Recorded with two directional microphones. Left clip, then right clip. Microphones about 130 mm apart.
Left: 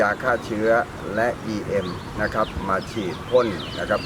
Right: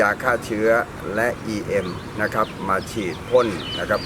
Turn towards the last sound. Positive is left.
turn(degrees=-15)  # may be behind; listen again after turning